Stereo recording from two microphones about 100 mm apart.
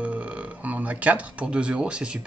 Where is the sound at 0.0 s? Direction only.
15° right (ahead or behind).